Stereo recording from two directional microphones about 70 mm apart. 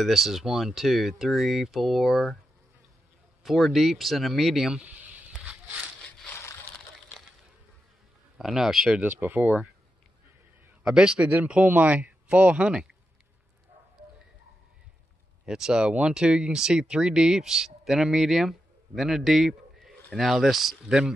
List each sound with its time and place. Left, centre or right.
0.0 s speech: centre
3.4 s speech: centre
4.7 s a sound: right
8.4 s speech: centre
9.0 s speech: right
10.8 s speech: centre
15.4 s speech: centre